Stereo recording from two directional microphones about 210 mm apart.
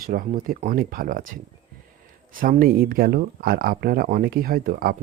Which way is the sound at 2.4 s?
40° right (ahead or behind).